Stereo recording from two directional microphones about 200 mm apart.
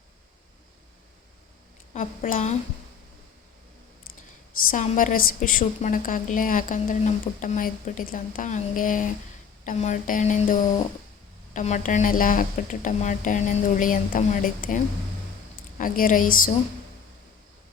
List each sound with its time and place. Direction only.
1.9 s a woman's voice: 40° left (ahead or behind)
4.7 s a woman's voice: 40° left (ahead or behind)
15.8 s a woman's voice: 40° left (ahead or behind)